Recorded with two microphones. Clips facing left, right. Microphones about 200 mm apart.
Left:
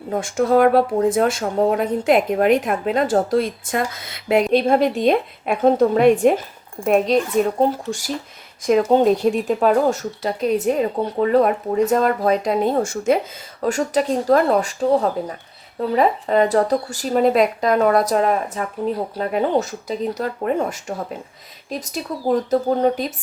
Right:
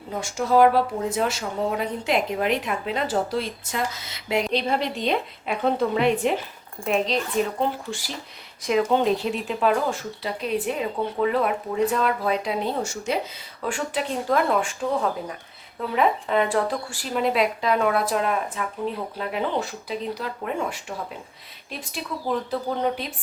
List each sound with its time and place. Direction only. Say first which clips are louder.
0.1 s speech: left 5 dB; 55° left (ahead or behind)